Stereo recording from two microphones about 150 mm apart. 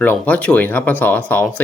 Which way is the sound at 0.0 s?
10° left (ahead or behind).